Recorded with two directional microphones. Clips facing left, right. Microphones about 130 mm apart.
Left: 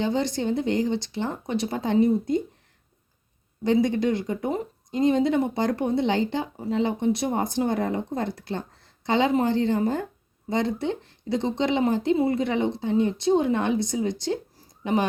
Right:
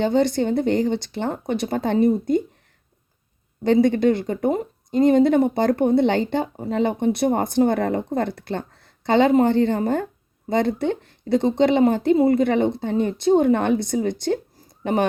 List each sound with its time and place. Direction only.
0.0 s speech: 55° right (ahead or behind)
3.6 s speech: 60° right (ahead or behind)
12.1 s a woman's voice: 40° right (ahead or behind)
12.4 s speech: 55° right (ahead or behind)